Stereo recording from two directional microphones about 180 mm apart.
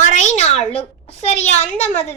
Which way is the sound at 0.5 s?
5° left (ahead or behind).